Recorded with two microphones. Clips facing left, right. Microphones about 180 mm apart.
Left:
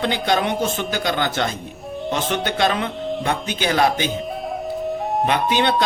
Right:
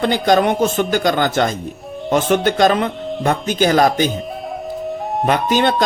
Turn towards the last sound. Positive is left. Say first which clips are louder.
# right 3 dB
turn(degrees=-45)  # may be behind; listen again after turning